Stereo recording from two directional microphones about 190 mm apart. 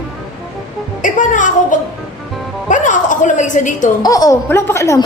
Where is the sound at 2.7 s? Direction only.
40° left (ahead or behind).